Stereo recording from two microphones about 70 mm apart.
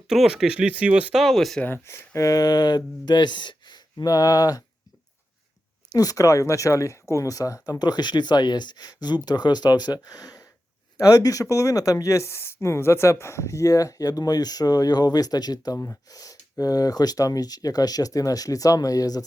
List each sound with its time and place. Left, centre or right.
0.1 s speech: centre
1.1 s speech: centre
1.9 s speech: left
3.9 s speech: left
5.9 s speech: left
7.7 s speech: left
9.2 s speech: left